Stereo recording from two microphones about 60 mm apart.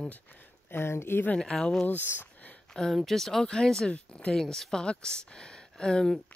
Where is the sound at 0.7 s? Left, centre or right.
Left.